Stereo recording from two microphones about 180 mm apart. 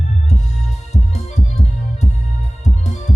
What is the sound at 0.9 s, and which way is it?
Music, 40° left (ahead or behind).